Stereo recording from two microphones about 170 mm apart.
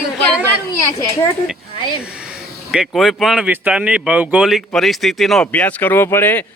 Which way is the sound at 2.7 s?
Centre (ahead or behind).